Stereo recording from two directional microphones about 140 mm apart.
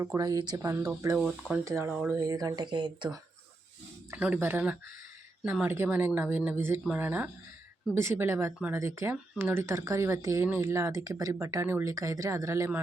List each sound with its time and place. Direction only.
0.0 s speech: 20° right (ahead or behind)
1.1 s speech: 10° right (ahead or behind); by 3.2 s 30° right (ahead or behind)
4.2 s speech: 10° right (ahead or behind)